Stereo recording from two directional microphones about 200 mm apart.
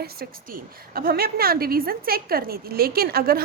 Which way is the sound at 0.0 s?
50° right (ahead or behind).